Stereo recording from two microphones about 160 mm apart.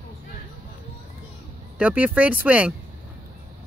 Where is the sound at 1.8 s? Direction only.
10° right (ahead or behind).